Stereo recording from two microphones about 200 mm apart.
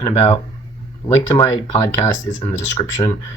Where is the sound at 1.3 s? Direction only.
20° left (ahead or behind).